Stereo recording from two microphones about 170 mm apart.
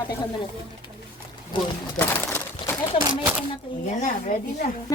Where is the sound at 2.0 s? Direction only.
15° left (ahead or behind).